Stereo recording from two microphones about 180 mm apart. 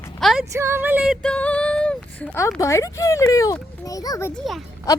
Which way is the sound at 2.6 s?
15° left (ahead or behind).